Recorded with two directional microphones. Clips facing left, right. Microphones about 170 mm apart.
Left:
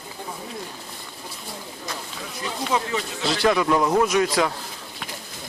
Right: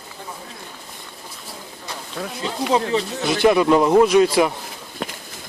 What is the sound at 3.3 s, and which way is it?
A man's voice, 20° right (ahead or behind).